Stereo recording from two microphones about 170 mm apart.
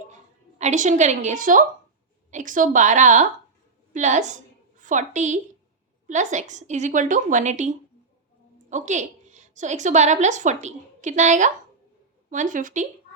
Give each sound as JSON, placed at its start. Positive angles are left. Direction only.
{"t": 0.6, "sound": "a woman's voice", "side_deg": -45}